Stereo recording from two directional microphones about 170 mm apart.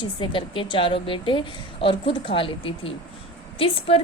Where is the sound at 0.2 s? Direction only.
30° left (ahead or behind).